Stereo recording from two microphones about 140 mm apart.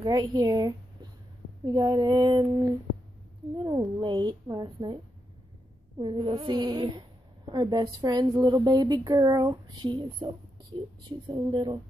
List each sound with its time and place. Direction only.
0.0 s female singing: 30° right (ahead or behind)
3.5 s speech: 30° right (ahead or behind)